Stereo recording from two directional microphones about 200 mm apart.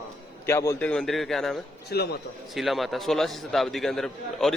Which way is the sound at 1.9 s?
55° left (ahead or behind).